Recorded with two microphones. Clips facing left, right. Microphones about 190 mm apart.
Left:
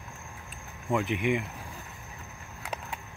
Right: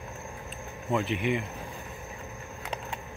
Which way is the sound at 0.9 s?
15° left (ahead or behind).